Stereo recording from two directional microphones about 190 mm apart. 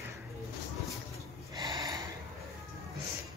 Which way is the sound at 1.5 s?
20° right (ahead or behind).